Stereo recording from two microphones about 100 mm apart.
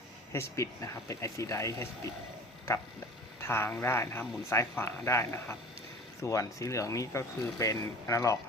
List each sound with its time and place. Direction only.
0.3 s speech: 30° left (ahead or behind)
3.4 s speech: 25° left (ahead or behind)